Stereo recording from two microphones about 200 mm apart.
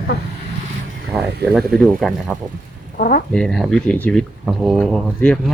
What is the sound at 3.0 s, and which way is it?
Speech, 45° left (ahead or behind).